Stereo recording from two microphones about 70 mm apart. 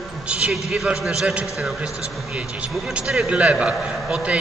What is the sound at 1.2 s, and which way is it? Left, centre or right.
Speech, centre.